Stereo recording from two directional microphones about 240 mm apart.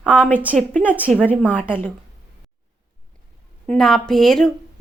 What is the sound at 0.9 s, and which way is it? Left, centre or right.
Speech, centre.